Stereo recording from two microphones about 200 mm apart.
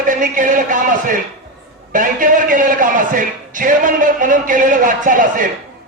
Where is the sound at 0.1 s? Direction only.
40° right (ahead or behind).